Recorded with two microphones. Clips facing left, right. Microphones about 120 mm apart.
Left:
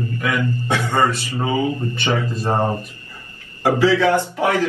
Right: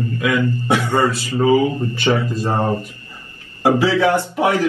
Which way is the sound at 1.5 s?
30° right (ahead or behind).